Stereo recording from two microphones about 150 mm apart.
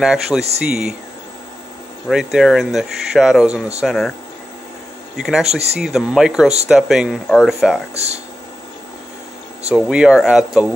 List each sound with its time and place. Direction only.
0.0 s speech: 5° right (ahead or behind)
2.0 s speech: centre (ahead or behind)
5.1 s speech: 5° right (ahead or behind)
5.5 s speech: 45° right (ahead or behind)
5.8 s speech: 5° right (ahead or behind)
7.9 s speech: 45° right (ahead or behind)
9.8 s speech: 5° right (ahead or behind)